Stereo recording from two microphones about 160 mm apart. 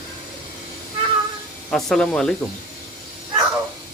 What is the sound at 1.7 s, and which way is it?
Speech, centre (ahead or behind).